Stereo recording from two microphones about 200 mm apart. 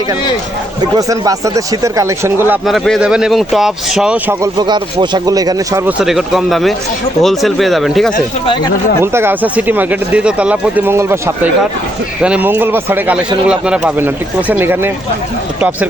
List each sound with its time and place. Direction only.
0.9 s speech: 15° right (ahead or behind)
2.6 s speech: centre (ahead or behind)
4.5 s speech: 20° right (ahead or behind)
6.0 s speech: centre (ahead or behind)
8.4 s speech: 20° left (ahead or behind)
9.1 s speech: 10° right (ahead or behind)